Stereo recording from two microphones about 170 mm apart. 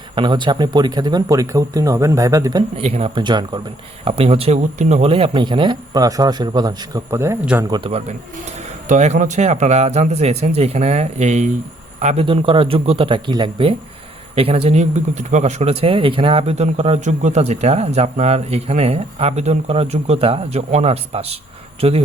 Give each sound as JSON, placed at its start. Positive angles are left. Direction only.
{"t": 0.2, "sound": "speech", "side_deg": -30}
{"t": 2.8, "sound": "speech", "side_deg": -40}
{"t": 3.2, "sound": "speech", "side_deg": -25}
{"t": 7.7, "sound": "speech", "side_deg": -35}
{"t": 8.9, "sound": "speech", "side_deg": -45}